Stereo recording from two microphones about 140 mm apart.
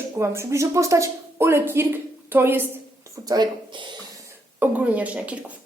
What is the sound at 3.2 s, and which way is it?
Speech, 30° right (ahead or behind).